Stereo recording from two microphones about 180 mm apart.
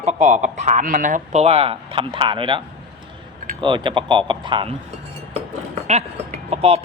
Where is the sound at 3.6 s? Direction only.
25° right (ahead or behind).